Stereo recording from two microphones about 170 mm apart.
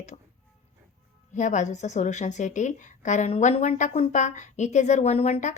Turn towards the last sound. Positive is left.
turn(degrees=40)  # may be behind; listen again after turning